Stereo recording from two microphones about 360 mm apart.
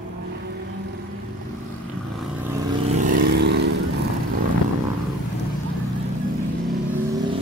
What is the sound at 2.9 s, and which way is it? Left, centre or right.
Vehicle, right.